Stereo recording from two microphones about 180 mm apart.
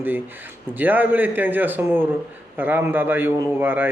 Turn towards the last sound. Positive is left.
turn(degrees=-10)  # may be behind; listen again after turning